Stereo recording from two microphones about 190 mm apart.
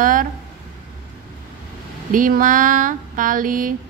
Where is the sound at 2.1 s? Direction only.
45° right (ahead or behind).